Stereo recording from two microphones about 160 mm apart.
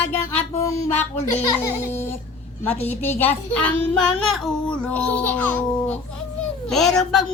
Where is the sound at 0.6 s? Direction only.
20° left (ahead or behind).